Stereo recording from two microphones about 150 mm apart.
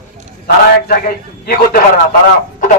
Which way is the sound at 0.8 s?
75° left (ahead or behind).